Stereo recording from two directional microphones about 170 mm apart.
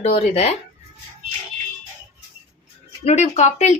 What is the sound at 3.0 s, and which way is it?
Speech, 40° left (ahead or behind).